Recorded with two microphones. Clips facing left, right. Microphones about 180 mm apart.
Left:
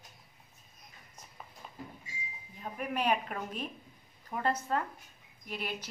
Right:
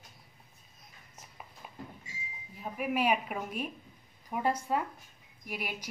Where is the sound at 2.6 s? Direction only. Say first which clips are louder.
Right 3 dB; 5° right (ahead or behind).